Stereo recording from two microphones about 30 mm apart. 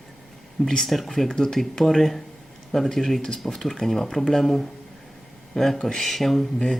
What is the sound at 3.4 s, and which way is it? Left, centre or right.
Speech, centre.